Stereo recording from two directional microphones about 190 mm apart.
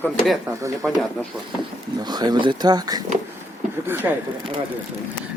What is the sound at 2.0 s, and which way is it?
Speech, 20° right (ahead or behind).